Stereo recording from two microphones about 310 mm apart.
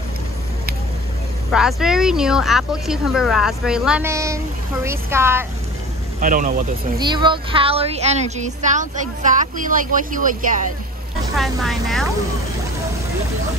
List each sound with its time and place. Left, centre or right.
1.5 s a woman's voice: centre
6.2 s speech: right
7.0 s speech: centre
11.3 s speech: centre